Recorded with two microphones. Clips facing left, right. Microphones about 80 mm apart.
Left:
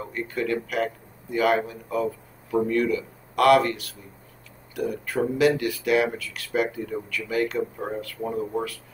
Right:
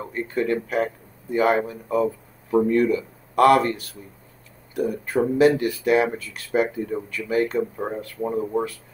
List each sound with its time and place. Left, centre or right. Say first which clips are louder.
0.0 s speech: right 3 dB; right
8.2 s speech: right 4 dB; centre